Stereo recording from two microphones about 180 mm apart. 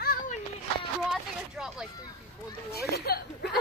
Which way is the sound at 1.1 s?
5° right (ahead or behind).